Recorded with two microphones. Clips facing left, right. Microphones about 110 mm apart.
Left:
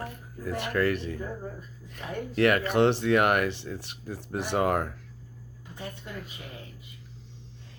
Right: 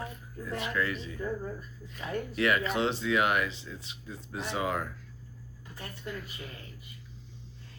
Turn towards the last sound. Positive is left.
turn(degrees=20)  # may be behind; listen again after turning